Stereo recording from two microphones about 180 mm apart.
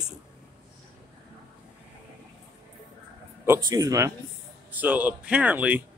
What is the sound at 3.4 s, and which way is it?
Speech, 15° right (ahead or behind).